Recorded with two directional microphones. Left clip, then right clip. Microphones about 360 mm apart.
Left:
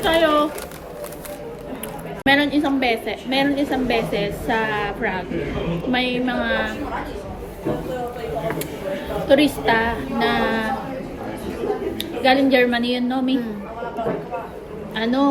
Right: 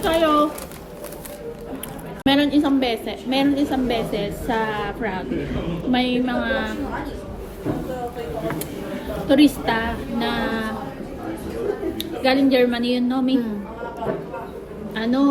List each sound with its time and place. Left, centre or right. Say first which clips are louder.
0.0 s a sound: left 1 dB; centre
2.2 s a woman's voice: left 1 dB; centre
9.2 s a woman's voice: left 1 dB; centre
11.9 s a woman's voice: left 3 dB; centre
14.9 s a woman's voice: left 1 dB; centre